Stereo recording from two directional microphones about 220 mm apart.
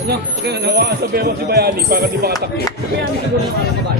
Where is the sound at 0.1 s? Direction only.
45° right (ahead or behind).